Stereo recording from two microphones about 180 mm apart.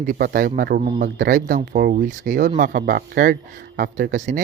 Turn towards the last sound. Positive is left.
turn(degrees=-45)  # may be behind; listen again after turning